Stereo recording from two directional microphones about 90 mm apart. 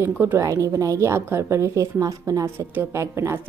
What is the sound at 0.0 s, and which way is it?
A woman's voice, 30° right (ahead or behind).